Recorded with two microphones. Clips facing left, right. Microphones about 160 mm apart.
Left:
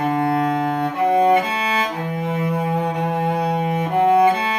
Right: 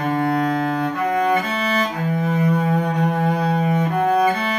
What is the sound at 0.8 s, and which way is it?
Cello, 25° left (ahead or behind).